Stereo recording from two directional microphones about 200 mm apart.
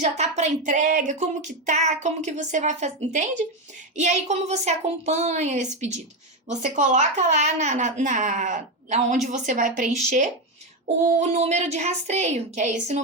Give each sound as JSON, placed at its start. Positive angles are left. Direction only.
{"t": 0.0, "sound": "speech", "side_deg": -35}